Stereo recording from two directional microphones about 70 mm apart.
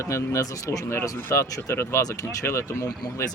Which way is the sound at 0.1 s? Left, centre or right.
Left.